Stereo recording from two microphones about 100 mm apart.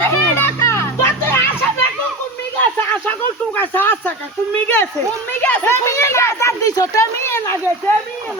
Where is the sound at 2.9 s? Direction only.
15° left (ahead or behind).